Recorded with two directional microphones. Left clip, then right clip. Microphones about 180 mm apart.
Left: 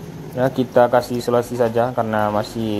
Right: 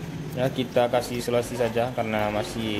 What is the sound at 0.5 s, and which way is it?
Speech, 25° left (ahead or behind).